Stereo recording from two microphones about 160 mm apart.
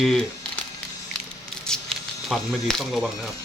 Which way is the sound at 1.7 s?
5° left (ahead or behind).